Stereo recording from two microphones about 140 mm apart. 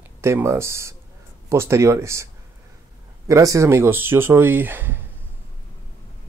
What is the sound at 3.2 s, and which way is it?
Speech, 25° right (ahead or behind).